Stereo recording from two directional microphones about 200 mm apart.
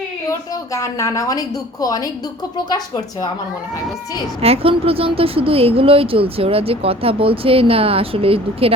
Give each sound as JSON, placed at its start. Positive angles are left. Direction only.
{"t": 0.3, "sound": "a woman's voice", "side_deg": 15}
{"t": 4.4, "sound": "a woman's voice", "side_deg": -30}